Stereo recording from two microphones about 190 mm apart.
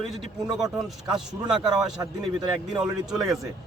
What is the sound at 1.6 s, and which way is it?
Speech, 25° right (ahead or behind).